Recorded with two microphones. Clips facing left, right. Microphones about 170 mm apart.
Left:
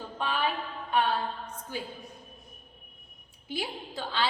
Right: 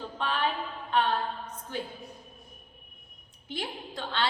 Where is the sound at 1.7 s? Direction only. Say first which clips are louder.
Right 2 dB; 10° left (ahead or behind).